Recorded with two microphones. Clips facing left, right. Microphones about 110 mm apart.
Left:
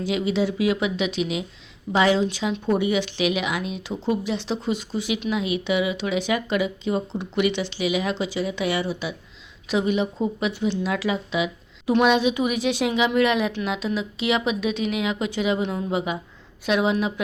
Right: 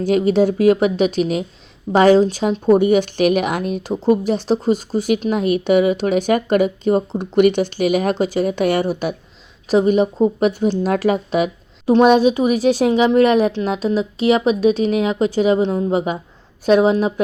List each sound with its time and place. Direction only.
0.0 s speech: 45° right (ahead or behind)